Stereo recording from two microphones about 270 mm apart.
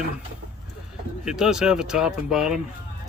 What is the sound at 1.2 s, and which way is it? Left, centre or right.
Speech, centre.